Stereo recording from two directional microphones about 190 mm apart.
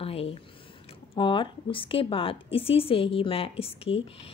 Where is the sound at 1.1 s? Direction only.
25° left (ahead or behind).